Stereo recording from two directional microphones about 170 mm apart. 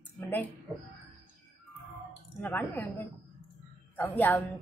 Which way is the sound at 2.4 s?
10° left (ahead or behind).